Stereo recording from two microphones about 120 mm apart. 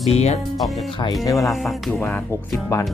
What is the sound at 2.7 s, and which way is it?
Speech, 25° left (ahead or behind).